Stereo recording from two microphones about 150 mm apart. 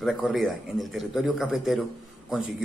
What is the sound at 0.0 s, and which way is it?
Speech, centre (ahead or behind).